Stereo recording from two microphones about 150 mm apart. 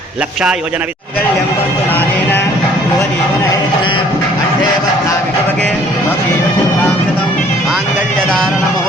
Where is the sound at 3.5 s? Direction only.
30° left (ahead or behind).